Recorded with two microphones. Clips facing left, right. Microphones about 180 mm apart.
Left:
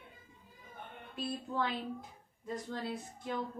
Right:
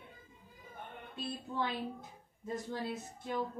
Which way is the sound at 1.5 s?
25° right (ahead or behind).